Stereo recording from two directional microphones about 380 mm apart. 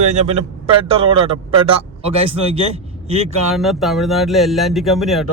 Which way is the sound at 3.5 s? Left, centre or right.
Centre.